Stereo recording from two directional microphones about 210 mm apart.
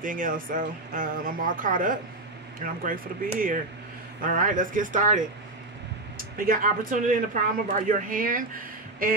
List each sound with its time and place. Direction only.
0.0 s speech: 40° right (ahead or behind)